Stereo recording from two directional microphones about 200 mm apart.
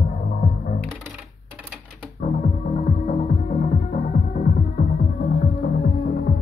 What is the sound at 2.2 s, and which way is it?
Music, 35° left (ahead or behind).